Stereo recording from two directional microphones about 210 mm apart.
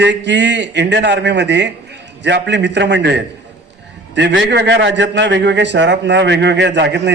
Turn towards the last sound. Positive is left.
turn(degrees=-55)  # may be behind; listen again after turning